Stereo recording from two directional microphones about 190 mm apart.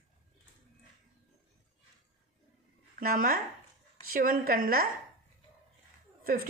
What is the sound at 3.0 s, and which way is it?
Speech, 50° right (ahead or behind).